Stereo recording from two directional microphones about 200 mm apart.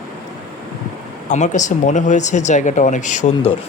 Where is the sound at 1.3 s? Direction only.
35° left (ahead or behind).